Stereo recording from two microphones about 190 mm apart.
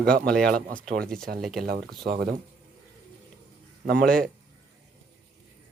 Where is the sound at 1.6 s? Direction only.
55° right (ahead or behind).